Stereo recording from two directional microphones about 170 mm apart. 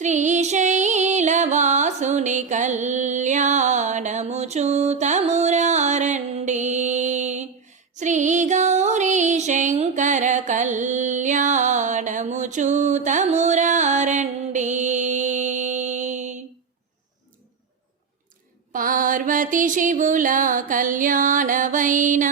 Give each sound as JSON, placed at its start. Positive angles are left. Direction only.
{"t": 0.0, "sound": "music", "side_deg": -45}
{"t": 18.7, "sound": "music", "side_deg": -55}